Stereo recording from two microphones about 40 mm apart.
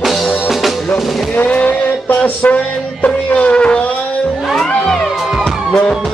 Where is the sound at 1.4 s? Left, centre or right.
Left.